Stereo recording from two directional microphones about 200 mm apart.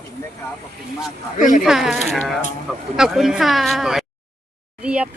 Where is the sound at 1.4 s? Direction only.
40° left (ahead or behind).